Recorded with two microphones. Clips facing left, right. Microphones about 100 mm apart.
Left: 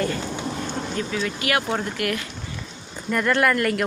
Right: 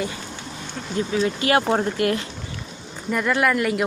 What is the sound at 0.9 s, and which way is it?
Speech, 25° right (ahead or behind).